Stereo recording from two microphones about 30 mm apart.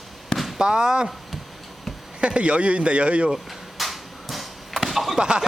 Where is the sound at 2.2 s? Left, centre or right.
Right.